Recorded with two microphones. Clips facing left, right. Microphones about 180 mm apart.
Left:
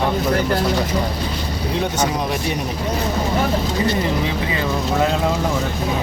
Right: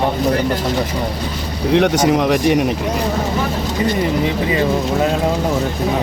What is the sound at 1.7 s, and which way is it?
Speech, 75° right (ahead or behind).